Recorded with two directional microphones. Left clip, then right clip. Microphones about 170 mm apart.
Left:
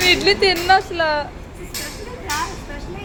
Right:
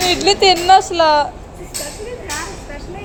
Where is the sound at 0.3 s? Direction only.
20° right (ahead or behind).